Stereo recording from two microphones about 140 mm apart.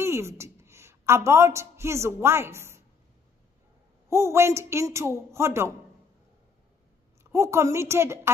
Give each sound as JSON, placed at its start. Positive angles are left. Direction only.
{"t": 0.0, "sound": "a woman's voice", "side_deg": -20}
{"t": 4.1, "sound": "speech", "side_deg": -20}
{"t": 7.3, "sound": "speech", "side_deg": -20}